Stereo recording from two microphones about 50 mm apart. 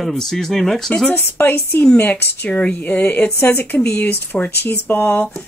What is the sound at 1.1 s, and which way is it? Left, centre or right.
Speech, left.